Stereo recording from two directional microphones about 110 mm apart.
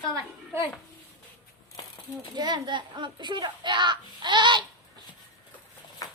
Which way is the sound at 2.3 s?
40° right (ahead or behind).